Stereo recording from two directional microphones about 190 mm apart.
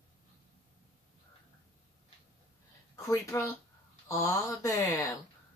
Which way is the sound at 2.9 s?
15° left (ahead or behind).